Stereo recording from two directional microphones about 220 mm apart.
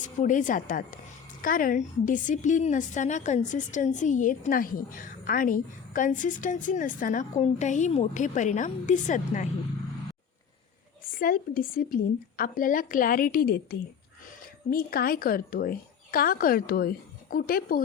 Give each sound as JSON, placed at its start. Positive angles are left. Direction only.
{"t": 0.0, "sound": "a woman's voice", "side_deg": 35}
{"t": 11.1, "sound": "a woman's voice", "side_deg": 40}